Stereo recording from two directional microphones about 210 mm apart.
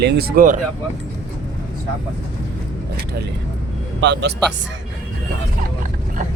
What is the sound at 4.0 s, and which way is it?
Speech, 55° right (ahead or behind).